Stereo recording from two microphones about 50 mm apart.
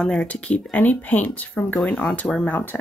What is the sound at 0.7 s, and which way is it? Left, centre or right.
Speech, left.